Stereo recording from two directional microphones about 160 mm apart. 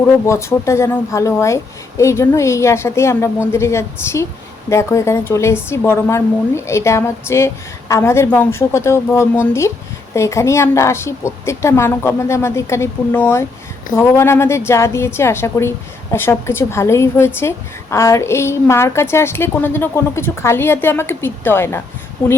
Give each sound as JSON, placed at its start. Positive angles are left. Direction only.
{"t": 0.0, "sound": "speech", "side_deg": 15}